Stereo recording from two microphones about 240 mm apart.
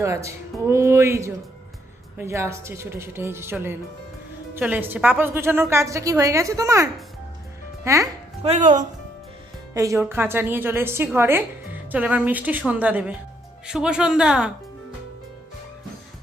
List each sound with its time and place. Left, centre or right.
0.0 s a woman's voice: centre
8.4 s speech: right
9.7 s a woman's voice: centre